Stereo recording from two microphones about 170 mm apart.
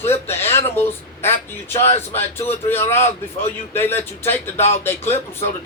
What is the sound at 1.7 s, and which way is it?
Speech, 35° left (ahead or behind).